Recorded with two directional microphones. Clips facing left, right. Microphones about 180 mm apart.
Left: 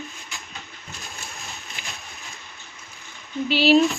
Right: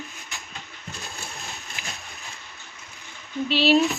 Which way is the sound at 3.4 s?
Centre (ahead or behind).